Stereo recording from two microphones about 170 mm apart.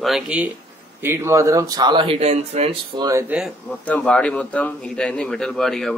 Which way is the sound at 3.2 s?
5° right (ahead or behind).